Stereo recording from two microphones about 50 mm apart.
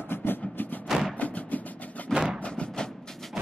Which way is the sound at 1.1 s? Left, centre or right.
Left.